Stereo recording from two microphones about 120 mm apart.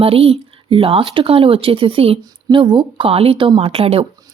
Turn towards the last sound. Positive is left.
turn(degrees=-55)  # may be behind; listen again after turning